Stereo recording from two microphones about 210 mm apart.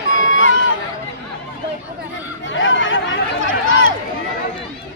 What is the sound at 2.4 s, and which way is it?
Chatter, 65° left (ahead or behind).